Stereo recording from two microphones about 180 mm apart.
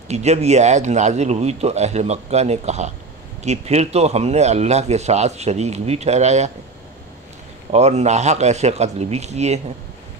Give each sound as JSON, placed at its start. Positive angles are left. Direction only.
{"t": 0.1, "sound": "speech", "side_deg": -40}
{"t": 7.7, "sound": "speech", "side_deg": -40}